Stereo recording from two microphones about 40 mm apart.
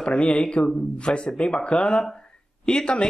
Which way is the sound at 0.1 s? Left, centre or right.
Left.